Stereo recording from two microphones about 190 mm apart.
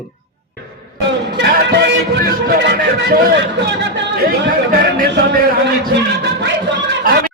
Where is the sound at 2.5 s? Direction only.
55° right (ahead or behind).